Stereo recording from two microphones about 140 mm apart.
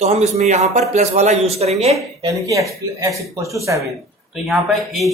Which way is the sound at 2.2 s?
25° right (ahead or behind).